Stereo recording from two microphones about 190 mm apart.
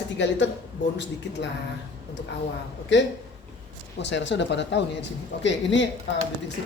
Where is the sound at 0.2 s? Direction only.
70° left (ahead or behind).